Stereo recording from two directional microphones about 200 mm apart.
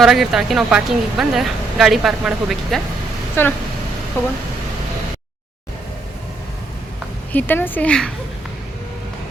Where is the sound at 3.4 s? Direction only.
10° left (ahead or behind).